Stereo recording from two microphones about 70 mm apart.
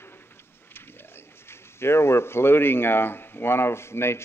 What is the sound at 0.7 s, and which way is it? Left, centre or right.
Speech, left.